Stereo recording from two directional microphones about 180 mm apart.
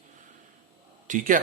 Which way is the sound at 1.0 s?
45° right (ahead or behind).